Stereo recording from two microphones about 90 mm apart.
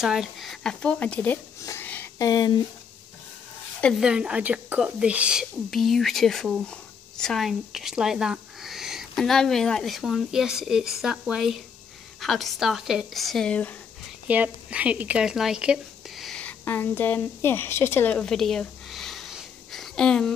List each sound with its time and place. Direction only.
0.0 s speech: 5° right (ahead or behind); by 1.3 s 15° left (ahead or behind)
1.3 s a sound: 25° left (ahead or behind)
2.1 s speech: 45° left (ahead or behind)
3.9 s speech: 10° right (ahead or behind)
5.7 s speech: 5° left (ahead or behind)
13.5 s speech: 15° left (ahead or behind)
14.2 s speech: 15° right (ahead or behind)
16.3 s a sound: 10° left (ahead or behind)
16.6 s speech: 20° left (ahead or behind)
18.2 s a sound: 5° left (ahead or behind)